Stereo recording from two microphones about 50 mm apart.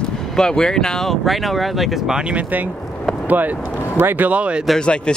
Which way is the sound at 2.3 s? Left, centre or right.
Right.